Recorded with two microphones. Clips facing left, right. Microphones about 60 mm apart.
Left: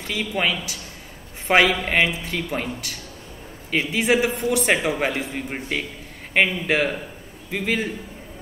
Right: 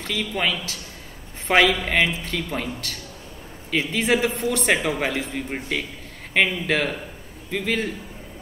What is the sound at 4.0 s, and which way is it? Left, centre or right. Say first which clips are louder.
A man's voice: left 2 dB; centre.